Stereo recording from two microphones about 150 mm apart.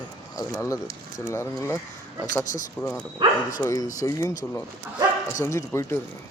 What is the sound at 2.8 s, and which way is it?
Speech, 20° left (ahead or behind).